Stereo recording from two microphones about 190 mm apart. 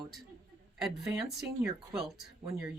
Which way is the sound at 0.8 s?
Centre (ahead or behind).